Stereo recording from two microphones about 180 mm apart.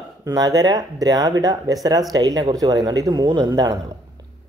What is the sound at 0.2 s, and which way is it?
Speech, 20° right (ahead or behind).